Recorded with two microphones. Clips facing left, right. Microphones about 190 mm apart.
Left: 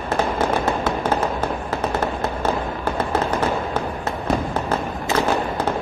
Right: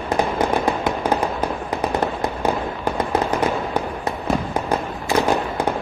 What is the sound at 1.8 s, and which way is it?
Fireworks, 15° right (ahead or behind).